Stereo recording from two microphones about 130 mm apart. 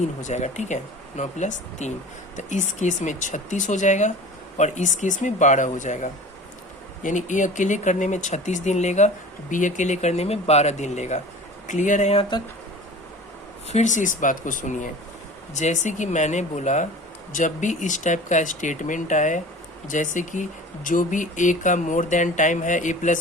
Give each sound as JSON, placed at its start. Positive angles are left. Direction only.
{"t": 0.0, "sound": "speech", "side_deg": 70}
{"t": 12.3, "sound": "speech", "side_deg": 35}
{"t": 13.7, "sound": "speech", "side_deg": 65}
{"t": 15.5, "sound": "speech", "side_deg": 65}